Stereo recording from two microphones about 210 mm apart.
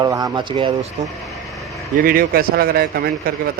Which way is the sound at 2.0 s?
45° right (ahead or behind).